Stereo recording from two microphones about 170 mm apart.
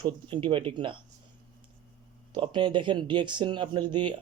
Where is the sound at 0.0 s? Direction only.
30° right (ahead or behind).